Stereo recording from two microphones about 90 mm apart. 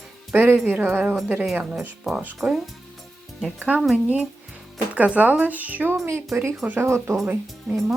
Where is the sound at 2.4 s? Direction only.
20° right (ahead or behind).